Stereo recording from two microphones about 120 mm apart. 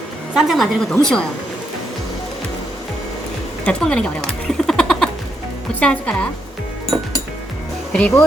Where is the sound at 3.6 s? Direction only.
10° left (ahead or behind).